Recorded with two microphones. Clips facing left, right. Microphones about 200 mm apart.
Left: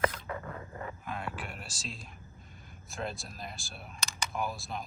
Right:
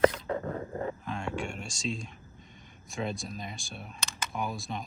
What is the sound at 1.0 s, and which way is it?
Whispering, 5° left (ahead or behind).